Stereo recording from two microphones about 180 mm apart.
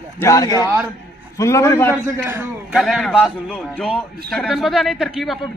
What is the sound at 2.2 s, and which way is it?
Speech, 10° right (ahead or behind).